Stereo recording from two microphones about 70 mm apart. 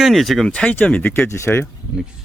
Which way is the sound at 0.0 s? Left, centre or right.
Centre.